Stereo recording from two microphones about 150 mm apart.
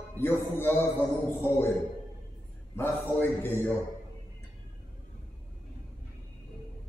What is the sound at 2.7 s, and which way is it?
A man's voice, 15° left (ahead or behind).